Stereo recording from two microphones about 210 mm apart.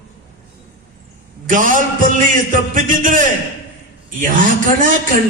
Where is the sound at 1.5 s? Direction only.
40° right (ahead or behind).